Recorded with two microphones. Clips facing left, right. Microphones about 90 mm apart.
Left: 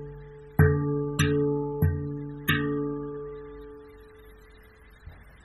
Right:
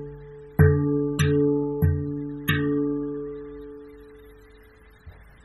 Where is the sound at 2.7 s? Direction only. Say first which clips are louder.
Right 5 dB; 40° left (ahead or behind).